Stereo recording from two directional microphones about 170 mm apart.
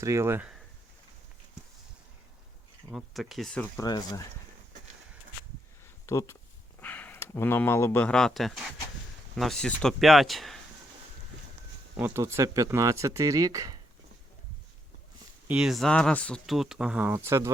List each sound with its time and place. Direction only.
0.0 s speech: 15° right (ahead or behind)
2.9 s speech: centre (ahead or behind)
3.8 s speech: 20° left (ahead or behind)
6.1 s speech: 15° left (ahead or behind); by 10.6 s centre (ahead or behind)
11.9 s speech: 15° right (ahead or behind)
15.4 s speech: 5° right (ahead or behind)